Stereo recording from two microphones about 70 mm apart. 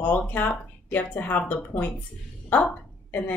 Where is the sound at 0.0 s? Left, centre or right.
Left.